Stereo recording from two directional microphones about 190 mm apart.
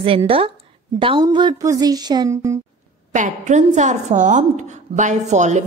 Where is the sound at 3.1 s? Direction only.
40° right (ahead or behind).